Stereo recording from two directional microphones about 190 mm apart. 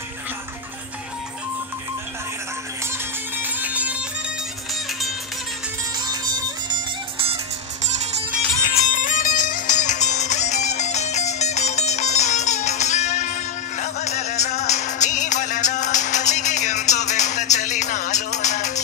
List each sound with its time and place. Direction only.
3.3 s music: 10° right (ahead or behind)
5.9 s music: 20° right (ahead or behind)
8.8 s music: 45° left (ahead or behind)